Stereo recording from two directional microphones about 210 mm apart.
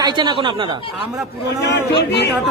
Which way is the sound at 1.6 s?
55° left (ahead or behind).